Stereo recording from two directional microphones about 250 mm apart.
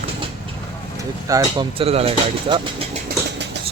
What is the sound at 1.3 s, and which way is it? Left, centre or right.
Speech, centre.